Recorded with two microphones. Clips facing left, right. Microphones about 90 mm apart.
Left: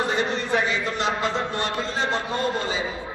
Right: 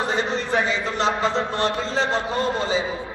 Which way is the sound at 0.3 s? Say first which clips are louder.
Right 1 dB; 25° right (ahead or behind).